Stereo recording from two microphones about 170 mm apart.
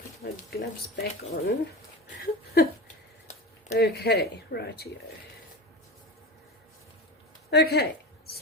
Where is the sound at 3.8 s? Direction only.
65° left (ahead or behind).